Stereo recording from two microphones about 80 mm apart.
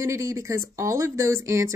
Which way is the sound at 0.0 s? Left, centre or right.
Right.